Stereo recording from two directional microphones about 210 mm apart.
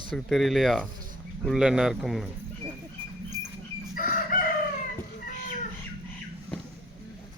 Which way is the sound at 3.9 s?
40° left (ahead or behind).